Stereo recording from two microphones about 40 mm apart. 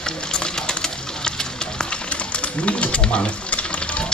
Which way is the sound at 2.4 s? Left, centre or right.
Left.